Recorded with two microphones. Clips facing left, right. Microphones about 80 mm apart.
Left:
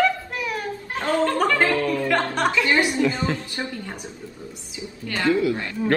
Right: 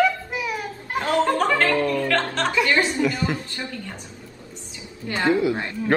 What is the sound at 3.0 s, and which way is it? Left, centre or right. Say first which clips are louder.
Speech: left 1 dB; centre.